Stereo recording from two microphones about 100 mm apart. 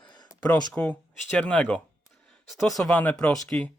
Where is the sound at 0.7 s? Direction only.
10° left (ahead or behind).